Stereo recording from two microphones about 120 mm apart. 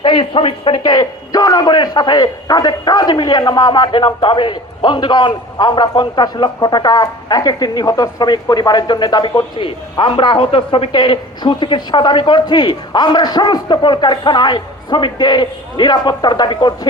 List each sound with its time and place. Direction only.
0.0 s a man's voice: 45° left (ahead or behind)